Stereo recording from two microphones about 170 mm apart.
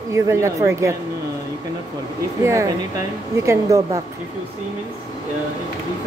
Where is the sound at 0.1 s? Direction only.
20° right (ahead or behind).